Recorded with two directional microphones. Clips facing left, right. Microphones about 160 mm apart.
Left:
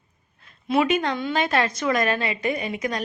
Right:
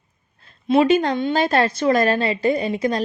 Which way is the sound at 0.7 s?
30° right (ahead or behind).